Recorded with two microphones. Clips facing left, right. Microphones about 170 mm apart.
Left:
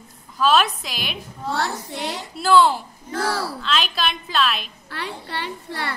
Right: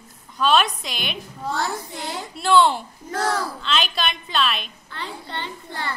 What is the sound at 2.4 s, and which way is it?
A woman's voice, centre (ahead or behind).